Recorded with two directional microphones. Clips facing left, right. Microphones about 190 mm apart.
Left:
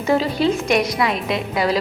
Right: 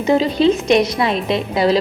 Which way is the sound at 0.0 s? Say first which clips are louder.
Right 4 dB; 20° right (ahead or behind).